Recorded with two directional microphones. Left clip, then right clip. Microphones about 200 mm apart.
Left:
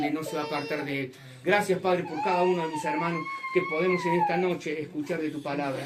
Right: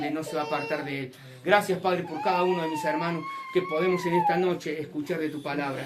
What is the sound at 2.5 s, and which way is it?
Speech, 20° right (ahead or behind).